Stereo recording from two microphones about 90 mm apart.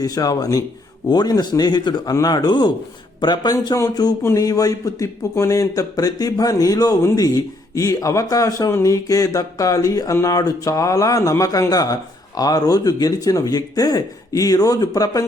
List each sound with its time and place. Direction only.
0.0 s speech: 45° left (ahead or behind)